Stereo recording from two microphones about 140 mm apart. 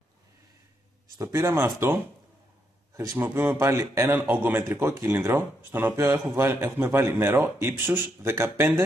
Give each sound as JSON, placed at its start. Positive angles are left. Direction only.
{"t": 1.1, "sound": "a man's voice", "side_deg": -20}